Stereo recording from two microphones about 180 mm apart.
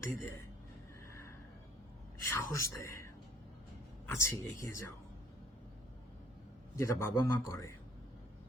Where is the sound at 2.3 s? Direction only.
15° left (ahead or behind).